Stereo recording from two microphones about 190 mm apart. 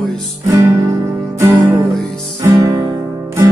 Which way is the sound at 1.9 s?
Centre (ahead or behind).